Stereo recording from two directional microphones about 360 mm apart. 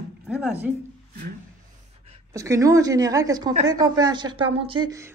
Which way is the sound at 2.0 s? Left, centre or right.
Centre.